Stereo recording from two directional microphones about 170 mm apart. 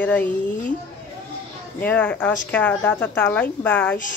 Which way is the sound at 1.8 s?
10° left (ahead or behind).